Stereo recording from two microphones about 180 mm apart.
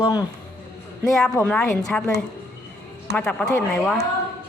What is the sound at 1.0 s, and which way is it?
Speech, 5° left (ahead or behind).